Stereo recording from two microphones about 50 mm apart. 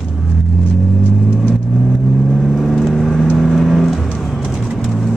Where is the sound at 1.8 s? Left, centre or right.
Centre.